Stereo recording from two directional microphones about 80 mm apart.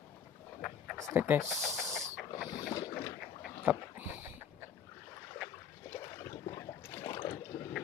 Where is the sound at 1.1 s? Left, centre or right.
Right.